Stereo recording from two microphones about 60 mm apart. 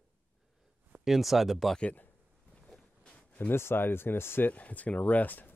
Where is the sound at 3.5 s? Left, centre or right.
Left.